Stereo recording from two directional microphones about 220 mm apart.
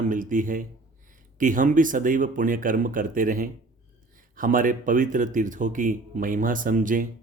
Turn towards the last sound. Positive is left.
turn(degrees=-35)  # may be behind; listen again after turning